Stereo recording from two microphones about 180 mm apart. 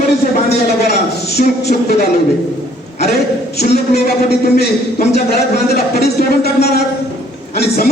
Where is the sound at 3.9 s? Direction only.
60° left (ahead or behind).